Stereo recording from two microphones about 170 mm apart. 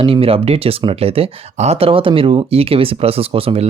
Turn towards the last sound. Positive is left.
turn(degrees=-35)  # may be behind; listen again after turning